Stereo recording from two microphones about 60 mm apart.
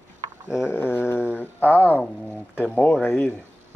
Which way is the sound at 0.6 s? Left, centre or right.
Left.